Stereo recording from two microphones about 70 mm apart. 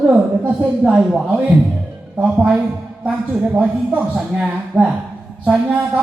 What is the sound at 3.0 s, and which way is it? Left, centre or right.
A man's voice, right.